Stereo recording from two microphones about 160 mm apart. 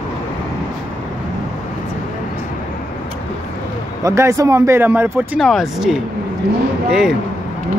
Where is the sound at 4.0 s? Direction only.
20° right (ahead or behind).